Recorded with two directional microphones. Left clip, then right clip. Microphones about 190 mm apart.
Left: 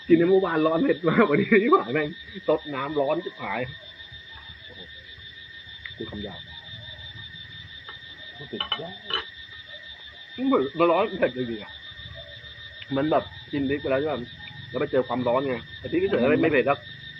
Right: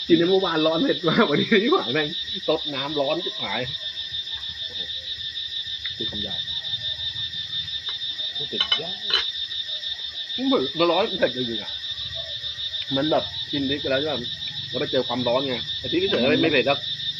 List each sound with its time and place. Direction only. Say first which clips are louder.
0.1 s speech: even; 30° right (ahead or behind)
8.5 s frog: right 5 dB; centre (ahead or behind)
10.3 s speech: right 1 dB; 45° right (ahead or behind)
12.9 s speech: even; 35° right (ahead or behind)